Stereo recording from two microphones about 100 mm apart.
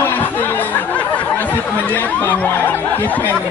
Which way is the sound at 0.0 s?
20° left (ahead or behind).